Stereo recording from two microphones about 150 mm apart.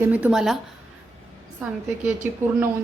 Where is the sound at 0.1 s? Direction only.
5° right (ahead or behind).